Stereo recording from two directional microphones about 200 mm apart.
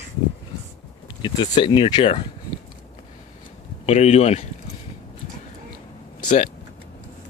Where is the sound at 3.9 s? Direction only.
35° left (ahead or behind).